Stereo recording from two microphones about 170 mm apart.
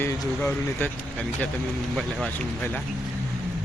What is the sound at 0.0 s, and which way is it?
Speech, 15° left (ahead or behind).